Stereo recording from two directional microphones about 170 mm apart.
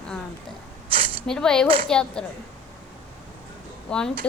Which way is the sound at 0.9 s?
30° right (ahead or behind).